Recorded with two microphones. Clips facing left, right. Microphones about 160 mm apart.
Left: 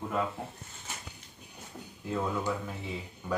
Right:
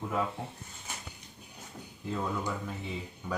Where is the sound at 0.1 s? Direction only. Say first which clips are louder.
Even; centre (ahead or behind).